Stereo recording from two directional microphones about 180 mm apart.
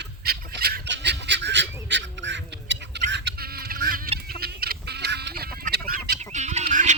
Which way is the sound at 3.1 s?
75° right (ahead or behind).